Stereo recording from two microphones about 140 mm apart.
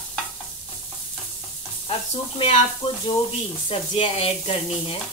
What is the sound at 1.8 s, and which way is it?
Speech, 45° left (ahead or behind).